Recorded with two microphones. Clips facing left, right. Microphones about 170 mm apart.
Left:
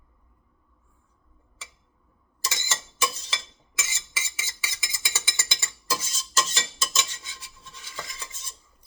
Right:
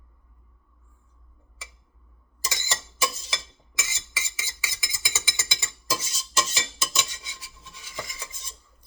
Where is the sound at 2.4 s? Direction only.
15° right (ahead or behind).